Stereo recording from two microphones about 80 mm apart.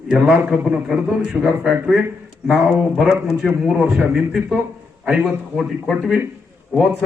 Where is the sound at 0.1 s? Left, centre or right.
Centre.